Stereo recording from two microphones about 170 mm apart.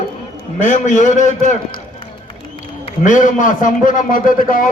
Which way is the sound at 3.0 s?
50° left (ahead or behind).